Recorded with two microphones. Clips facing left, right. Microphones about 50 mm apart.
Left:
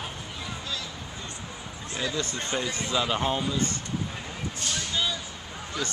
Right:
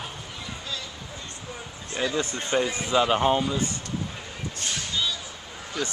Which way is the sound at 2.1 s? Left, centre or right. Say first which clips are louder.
Right 5 dB; centre.